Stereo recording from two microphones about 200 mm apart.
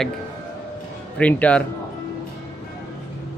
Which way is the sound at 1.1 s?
5° left (ahead or behind).